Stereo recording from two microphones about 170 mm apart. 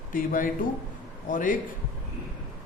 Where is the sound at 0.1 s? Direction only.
55° left (ahead or behind).